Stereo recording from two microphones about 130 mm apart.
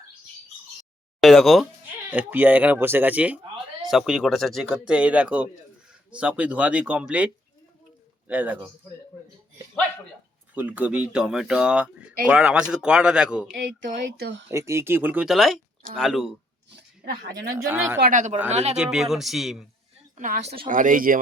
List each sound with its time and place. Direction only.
1.2 s speech: centre (ahead or behind)
2.0 s speech: 15° right (ahead or behind)
8.3 s speech: 10° right (ahead or behind)
10.5 s speech: 10° right (ahead or behind)
13.5 s a sound: 90° right
14.5 s speech: 20° right (ahead or behind)
15.3 s speech: centre (ahead or behind)
17.7 s speech: 15° right (ahead or behind)
18.1 s a woman's voice: 70° right (ahead or behind)
18.5 s speech: 60° right (ahead or behind)
18.8 s speech: 5° right (ahead or behind)
20.1 s a woman's voice: 75° right (ahead or behind)
20.7 s speech: 90° right